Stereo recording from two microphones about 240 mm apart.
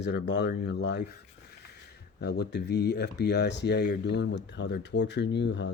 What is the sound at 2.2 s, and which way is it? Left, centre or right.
Speech, left.